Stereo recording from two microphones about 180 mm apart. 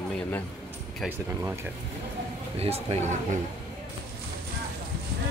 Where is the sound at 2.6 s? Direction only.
35° right (ahead or behind).